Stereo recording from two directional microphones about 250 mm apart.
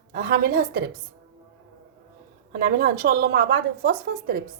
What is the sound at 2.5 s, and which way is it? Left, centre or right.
A woman's voice, right.